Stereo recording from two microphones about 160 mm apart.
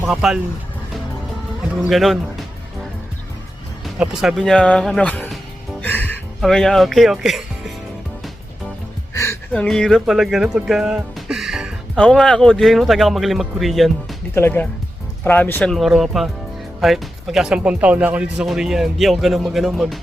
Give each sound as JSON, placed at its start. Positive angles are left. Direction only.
{"t": 0.1, "sound": "speech", "side_deg": -5}
{"t": 1.8, "sound": "speech", "side_deg": 0}
{"t": 3.8, "sound": "speech", "side_deg": -5}
{"t": 5.8, "sound": "music", "side_deg": 10}
{"t": 6.4, "sound": "speech", "side_deg": 0}
{"t": 9.1, "sound": "music", "side_deg": 20}
{"t": 9.5, "sound": "speech", "side_deg": 5}
{"t": 14.3, "sound": "speech", "side_deg": 15}
{"t": 15.7, "sound": "speech", "side_deg": 0}